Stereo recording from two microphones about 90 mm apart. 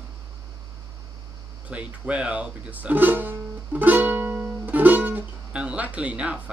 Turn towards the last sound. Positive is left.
turn(degrees=-15)  # may be behind; listen again after turning